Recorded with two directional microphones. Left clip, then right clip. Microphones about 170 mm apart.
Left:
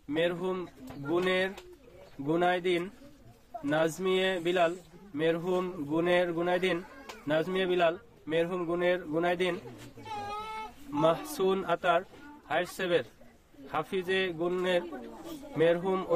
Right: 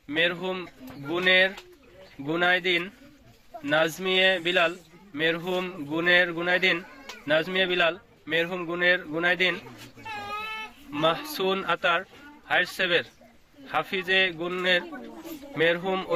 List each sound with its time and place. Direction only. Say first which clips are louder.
0.1 s a man's voice: right 4 dB; 15° left (ahead or behind)
10.9 s a man's voice: right 2 dB; 15° left (ahead or behind)